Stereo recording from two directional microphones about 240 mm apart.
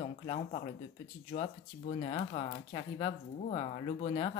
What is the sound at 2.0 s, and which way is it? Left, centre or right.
Speech, left.